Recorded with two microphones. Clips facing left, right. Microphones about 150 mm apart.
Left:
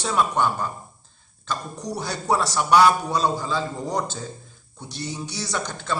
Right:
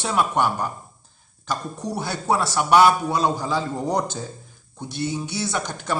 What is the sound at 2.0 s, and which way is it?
Speech, 5° right (ahead or behind).